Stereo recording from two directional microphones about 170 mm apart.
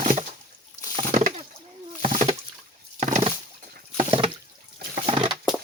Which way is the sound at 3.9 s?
35° right (ahead or behind).